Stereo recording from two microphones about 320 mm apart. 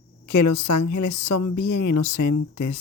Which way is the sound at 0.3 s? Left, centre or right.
Left.